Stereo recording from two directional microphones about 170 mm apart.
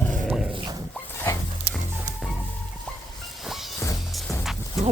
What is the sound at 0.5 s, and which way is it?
Dog, 25° right (ahead or behind).